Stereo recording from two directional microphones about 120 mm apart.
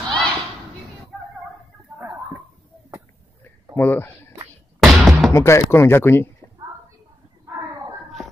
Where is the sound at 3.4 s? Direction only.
15° left (ahead or behind).